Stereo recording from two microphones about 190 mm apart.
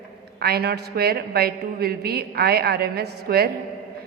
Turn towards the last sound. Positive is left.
turn(degrees=-55)  # may be behind; listen again after turning